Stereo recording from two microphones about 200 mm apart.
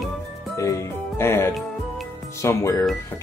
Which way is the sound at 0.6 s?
15° left (ahead or behind).